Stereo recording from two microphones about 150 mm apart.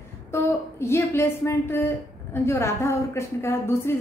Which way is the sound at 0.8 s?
15° left (ahead or behind).